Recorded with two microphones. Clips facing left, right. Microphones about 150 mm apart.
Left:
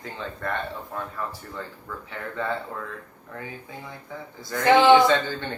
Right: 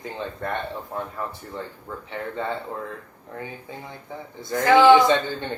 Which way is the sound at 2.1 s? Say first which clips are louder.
Right 1 dB; 20° right (ahead or behind).